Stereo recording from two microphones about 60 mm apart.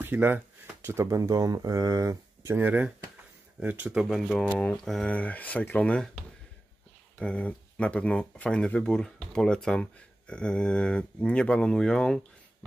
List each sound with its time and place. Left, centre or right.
0.0 s speech: right
0.8 s speech: right
1.1 s speech: right
2.5 s speech: right
4.1 s speech: centre
5.0 s speech: left